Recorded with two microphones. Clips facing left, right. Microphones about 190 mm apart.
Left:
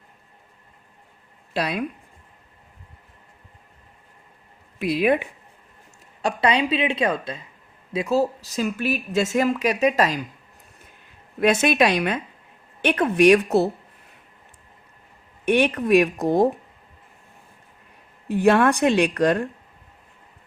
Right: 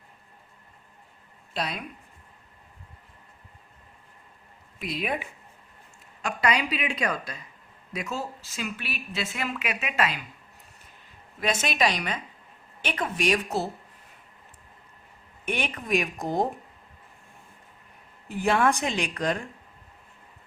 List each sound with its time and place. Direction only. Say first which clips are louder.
5.0 s a woman's voice: left 11 dB; 65° left (ahead or behind)
6.2 s a woman's voice: left 5 dB; 30° left (ahead or behind)
11.3 s a woman's voice: left 8 dB; 60° left (ahead or behind)
15.4 s a woman's voice: left 11 dB; 65° left (ahead or behind)
18.3 s a woman's voice: left 6 dB; 65° left (ahead or behind)